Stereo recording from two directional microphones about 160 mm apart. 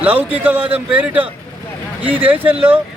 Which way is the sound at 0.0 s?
10° right (ahead or behind).